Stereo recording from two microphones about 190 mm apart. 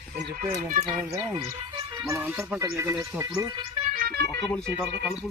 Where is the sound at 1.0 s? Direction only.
15° right (ahead or behind).